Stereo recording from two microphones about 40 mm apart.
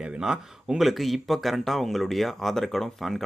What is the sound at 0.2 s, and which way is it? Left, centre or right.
Speech, centre.